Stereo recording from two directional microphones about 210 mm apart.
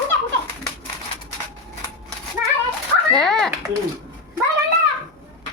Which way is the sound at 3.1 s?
Centre (ahead or behind).